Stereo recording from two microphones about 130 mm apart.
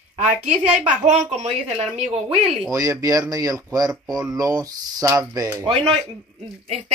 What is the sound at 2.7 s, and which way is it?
Speech, 25° right (ahead or behind).